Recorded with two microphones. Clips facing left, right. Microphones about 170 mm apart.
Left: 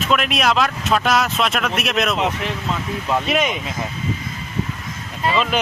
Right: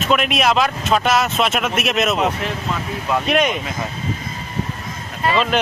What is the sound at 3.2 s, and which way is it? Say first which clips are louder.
Speech: right 6 dB; centre (ahead or behind).